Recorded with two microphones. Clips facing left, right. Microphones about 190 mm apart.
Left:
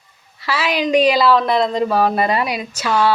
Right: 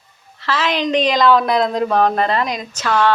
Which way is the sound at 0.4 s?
10° left (ahead or behind).